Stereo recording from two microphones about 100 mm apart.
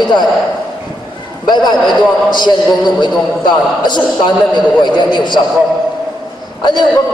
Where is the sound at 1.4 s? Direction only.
45° left (ahead or behind).